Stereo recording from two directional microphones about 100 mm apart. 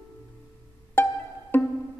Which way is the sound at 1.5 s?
20° left (ahead or behind).